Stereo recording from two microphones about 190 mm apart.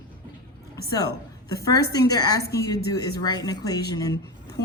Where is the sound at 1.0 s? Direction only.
20° left (ahead or behind).